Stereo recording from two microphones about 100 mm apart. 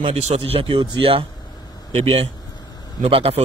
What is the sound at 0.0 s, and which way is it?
A man's voice, 75° right (ahead or behind).